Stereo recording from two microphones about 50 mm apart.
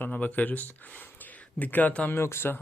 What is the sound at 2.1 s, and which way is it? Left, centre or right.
Speech, left.